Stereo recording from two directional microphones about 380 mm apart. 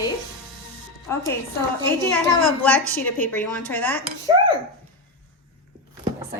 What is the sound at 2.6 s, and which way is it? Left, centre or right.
A woman's voice, centre.